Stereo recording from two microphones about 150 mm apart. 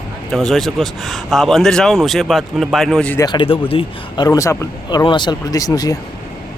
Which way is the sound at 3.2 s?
30° left (ahead or behind).